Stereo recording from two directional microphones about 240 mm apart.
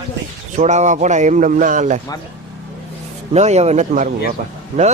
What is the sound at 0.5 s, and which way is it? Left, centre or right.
A man's voice, right.